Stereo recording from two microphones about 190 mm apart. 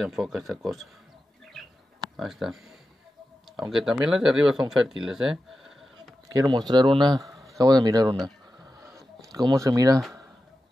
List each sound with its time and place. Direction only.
0.0 s speech: centre (ahead or behind)
2.1 s speech: centre (ahead or behind)
3.7 s speech: centre (ahead or behind)
5.0 s bleat: centre (ahead or behind)
6.2 s speech: 20° right (ahead or behind)
9.5 s speech: 20° right (ahead or behind)